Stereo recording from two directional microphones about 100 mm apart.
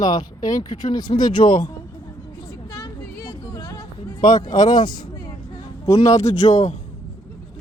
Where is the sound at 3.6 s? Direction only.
40° left (ahead or behind).